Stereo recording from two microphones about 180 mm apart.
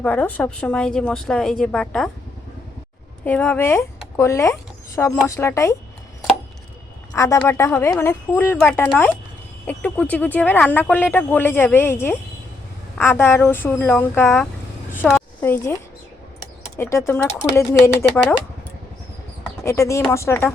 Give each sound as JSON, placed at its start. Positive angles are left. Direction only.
{"t": 0.0, "sound": "speech", "side_deg": 10}
{"t": 3.2, "sound": "speech", "side_deg": 10}
{"t": 7.1, "sound": "speech", "side_deg": 15}
{"t": 15.0, "sound": "a sound", "side_deg": 0}
{"t": 15.4, "sound": "speech", "side_deg": 15}
{"t": 19.6, "sound": "speech", "side_deg": 15}